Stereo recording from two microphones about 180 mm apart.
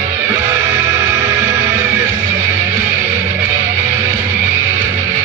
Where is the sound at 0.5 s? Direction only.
10° right (ahead or behind).